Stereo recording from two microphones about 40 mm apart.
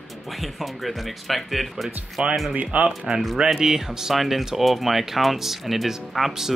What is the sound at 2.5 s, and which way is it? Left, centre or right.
Speech, right.